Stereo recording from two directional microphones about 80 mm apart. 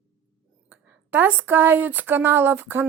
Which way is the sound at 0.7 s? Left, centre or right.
Right.